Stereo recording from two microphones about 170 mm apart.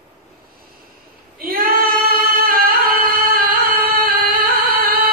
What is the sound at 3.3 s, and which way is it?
Singing, 55° right (ahead or behind).